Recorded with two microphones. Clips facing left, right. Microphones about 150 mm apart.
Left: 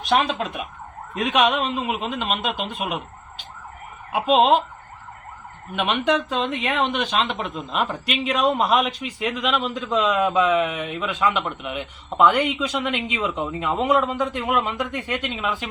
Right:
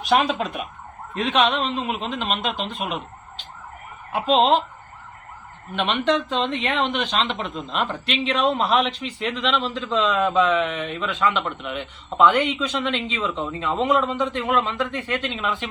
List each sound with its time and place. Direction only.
0.0 s speech: centre (ahead or behind)
1.1 s speech: 10° left (ahead or behind)
4.1 s speech: 10° left (ahead or behind)
5.7 s speech: 10° left (ahead or behind)